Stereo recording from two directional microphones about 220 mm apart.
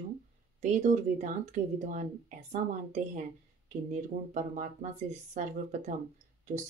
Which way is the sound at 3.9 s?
35° right (ahead or behind).